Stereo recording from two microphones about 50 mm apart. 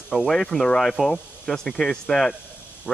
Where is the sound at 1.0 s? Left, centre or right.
Centre.